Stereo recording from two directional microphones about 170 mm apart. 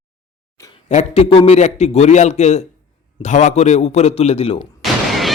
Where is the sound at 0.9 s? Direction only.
40° left (ahead or behind).